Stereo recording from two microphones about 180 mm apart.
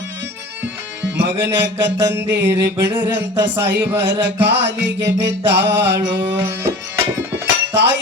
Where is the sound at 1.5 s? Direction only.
70° right (ahead or behind).